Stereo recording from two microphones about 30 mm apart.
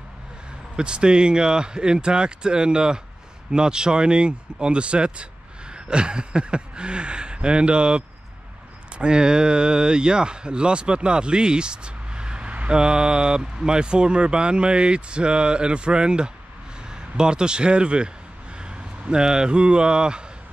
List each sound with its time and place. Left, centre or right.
0.7 s speech: right